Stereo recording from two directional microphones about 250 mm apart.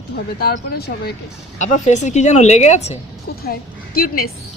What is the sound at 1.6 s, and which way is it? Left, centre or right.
Speech, left.